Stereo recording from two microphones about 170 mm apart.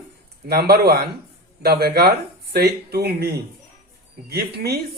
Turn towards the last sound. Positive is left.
turn(degrees=-70)  # may be behind; listen again after turning